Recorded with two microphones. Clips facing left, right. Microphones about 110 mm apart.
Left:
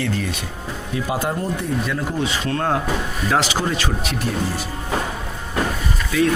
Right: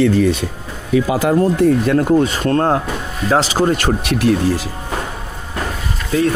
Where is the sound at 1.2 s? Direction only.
80° right; by 4.1 s 50° right (ahead or behind).